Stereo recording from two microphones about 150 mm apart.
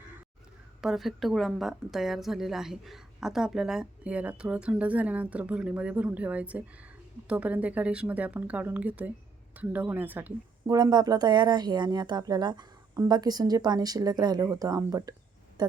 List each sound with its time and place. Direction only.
0.8 s a woman's voice: centre (ahead or behind)
10.7 s speech: 25° right (ahead or behind)